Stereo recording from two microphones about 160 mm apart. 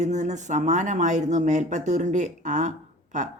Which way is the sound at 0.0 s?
50° right (ahead or behind).